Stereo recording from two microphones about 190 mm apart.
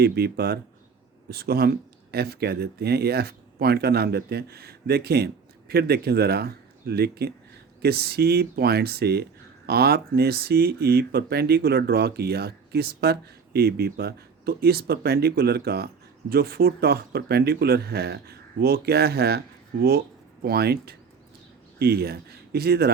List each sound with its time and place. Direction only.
0.0 s speech: 55° right (ahead or behind)
20.4 s speech: 55° right (ahead or behind)